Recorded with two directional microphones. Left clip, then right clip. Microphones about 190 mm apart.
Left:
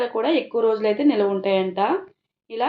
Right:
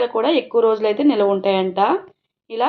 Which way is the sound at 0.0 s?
40° right (ahead or behind).